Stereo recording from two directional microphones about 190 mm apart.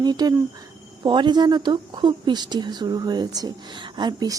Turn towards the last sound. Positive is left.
turn(degrees=-20)  # may be behind; listen again after turning